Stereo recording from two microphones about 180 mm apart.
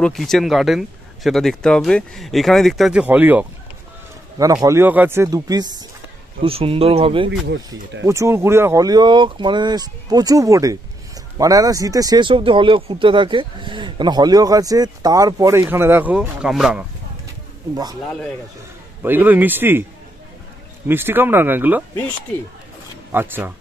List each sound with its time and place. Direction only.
0.0 s speech: centre (ahead or behind)
4.6 s speech: 10° right (ahead or behind); by 7.2 s 30° right (ahead or behind)
7.2 s speech: 70° right (ahead or behind)
8.0 s speech: 15° right (ahead or behind)
19.0 s speech: 10° right (ahead or behind)
20.9 s speech: 10° right (ahead or behind)
23.1 s speech: 10° right (ahead or behind)